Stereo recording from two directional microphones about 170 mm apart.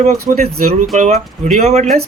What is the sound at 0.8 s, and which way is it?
Speech, 45° right (ahead or behind).